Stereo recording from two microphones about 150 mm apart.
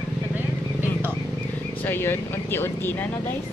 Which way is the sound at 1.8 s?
15° left (ahead or behind).